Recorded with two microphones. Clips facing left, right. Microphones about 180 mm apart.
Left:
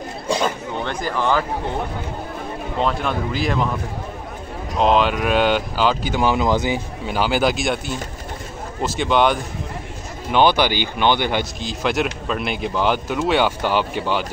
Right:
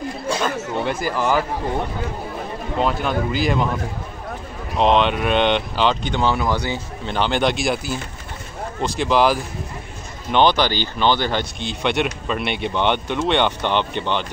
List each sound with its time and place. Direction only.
0.8 s speech: 5° right (ahead or behind)
2.8 s speech: centre (ahead or behind)
4.7 s speech: centre (ahead or behind)
6.3 s speech: 20° left (ahead or behind)
7.1 s speech: 5° left (ahead or behind)
10.3 s speech: 10° left (ahead or behind)
11.6 s speech: centre (ahead or behind)